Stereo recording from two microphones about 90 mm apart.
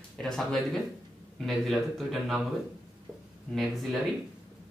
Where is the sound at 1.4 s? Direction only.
Centre (ahead or behind).